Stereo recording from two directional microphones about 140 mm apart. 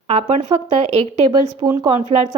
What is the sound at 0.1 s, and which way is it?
Speech, 55° right (ahead or behind).